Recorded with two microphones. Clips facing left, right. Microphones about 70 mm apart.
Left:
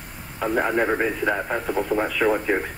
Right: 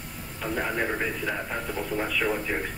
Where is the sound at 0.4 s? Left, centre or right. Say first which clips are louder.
Left 7 dB; left.